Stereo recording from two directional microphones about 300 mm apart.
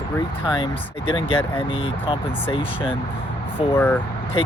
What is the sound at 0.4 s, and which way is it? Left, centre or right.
Speech, centre.